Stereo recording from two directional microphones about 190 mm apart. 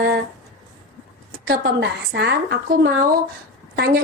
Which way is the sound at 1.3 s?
55° right (ahead or behind).